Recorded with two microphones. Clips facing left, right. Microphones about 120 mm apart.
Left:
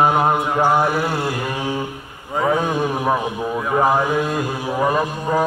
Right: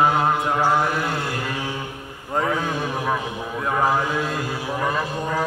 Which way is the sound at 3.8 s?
15° left (ahead or behind).